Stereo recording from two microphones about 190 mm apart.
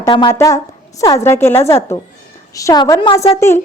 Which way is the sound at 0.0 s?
20° left (ahead or behind).